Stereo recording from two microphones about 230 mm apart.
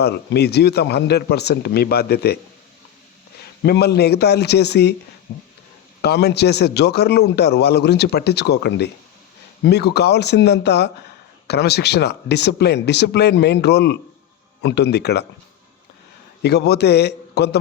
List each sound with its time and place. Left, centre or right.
0.0 s a man's voice: left
3.4 s a man's voice: left
6.0 s a man's voice: left
16.4 s a man's voice: left